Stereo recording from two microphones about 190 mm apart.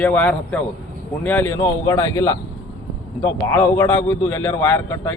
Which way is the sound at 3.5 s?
15° left (ahead or behind).